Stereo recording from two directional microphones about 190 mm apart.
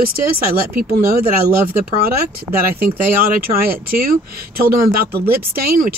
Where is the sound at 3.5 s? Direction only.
50° right (ahead or behind).